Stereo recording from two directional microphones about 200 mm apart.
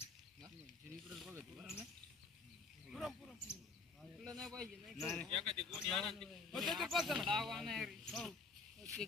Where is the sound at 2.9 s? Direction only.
Centre (ahead or behind).